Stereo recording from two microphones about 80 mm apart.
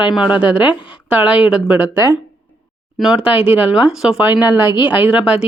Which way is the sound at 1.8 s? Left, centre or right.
Right.